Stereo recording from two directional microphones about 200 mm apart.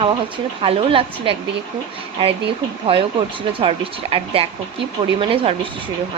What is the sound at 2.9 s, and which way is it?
Speech, 25° right (ahead or behind).